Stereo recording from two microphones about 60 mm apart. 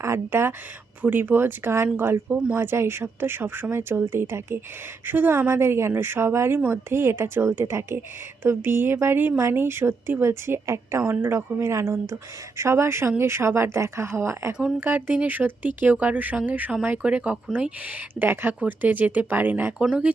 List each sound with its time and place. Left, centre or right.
0.0 s speech: right
5.5 s speech: right
8.4 s speech: right
14.8 s speech: right